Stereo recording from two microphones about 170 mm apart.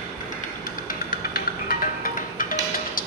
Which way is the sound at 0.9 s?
55° left (ahead or behind).